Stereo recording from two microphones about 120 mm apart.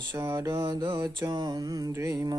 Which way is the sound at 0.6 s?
40° right (ahead or behind).